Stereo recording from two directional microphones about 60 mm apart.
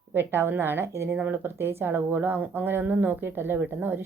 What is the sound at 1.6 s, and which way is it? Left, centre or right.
Speech, right.